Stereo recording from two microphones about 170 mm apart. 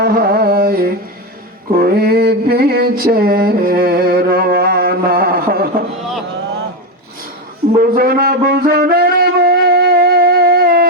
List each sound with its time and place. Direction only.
0.0 s carnatic music: 65° right (ahead or behind)
1.7 s a sound: 65° right (ahead or behind)
7.8 s music: 65° right (ahead or behind)